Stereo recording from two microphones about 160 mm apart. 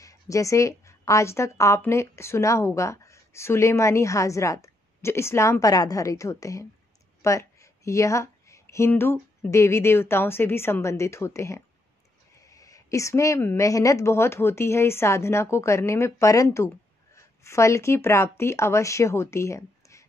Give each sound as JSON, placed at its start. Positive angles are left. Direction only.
{"t": 0.0, "sound": "a woman's voice", "side_deg": 20}